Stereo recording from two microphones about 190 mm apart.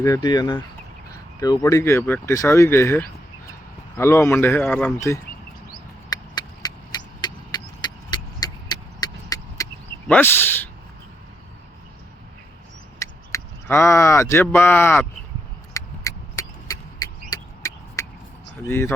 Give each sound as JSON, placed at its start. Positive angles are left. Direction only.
{"t": 0.0, "sound": "speech", "side_deg": 20}
{"t": 6.1, "sound": "vehicle", "side_deg": 20}
{"t": 10.1, "sound": "speech", "side_deg": 10}
{"t": 13.0, "sound": "speech", "side_deg": 15}
{"t": 15.7, "sound": "a sound", "side_deg": 15}
{"t": 18.7, "sound": "speech", "side_deg": 15}